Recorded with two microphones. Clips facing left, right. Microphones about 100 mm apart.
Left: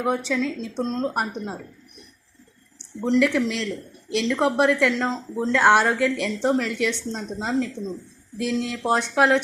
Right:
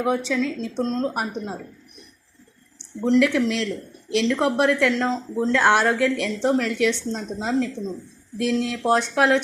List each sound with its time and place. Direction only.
0.3 s a woman's voice: 5° left (ahead or behind)
1.0 s speech: centre (ahead or behind)
3.2 s speech: centre (ahead or behind)